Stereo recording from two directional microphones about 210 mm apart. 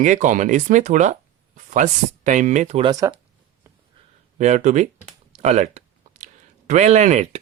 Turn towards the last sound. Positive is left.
turn(degrees=-35)  # may be behind; listen again after turning